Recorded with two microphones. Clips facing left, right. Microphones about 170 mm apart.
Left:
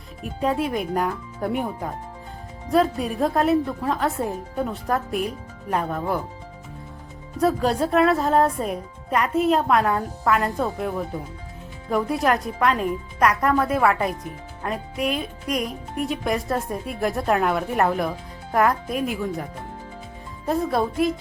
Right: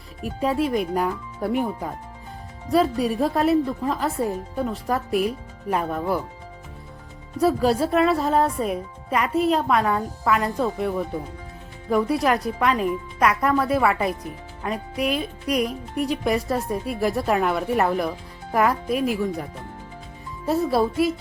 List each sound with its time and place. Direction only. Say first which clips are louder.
0.2 s speech: right 1 dB; centre (ahead or behind)
7.3 s speech: right 1 dB; centre (ahead or behind)
20.5 s speech: right 2 dB; 5° right (ahead or behind)